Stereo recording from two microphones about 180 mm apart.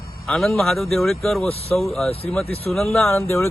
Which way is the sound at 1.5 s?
35° left (ahead or behind).